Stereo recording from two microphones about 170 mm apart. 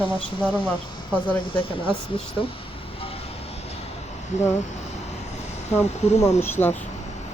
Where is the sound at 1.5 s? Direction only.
30° left (ahead or behind).